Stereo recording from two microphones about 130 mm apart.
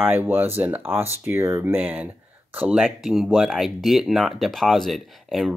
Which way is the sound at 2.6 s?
Centre (ahead or behind).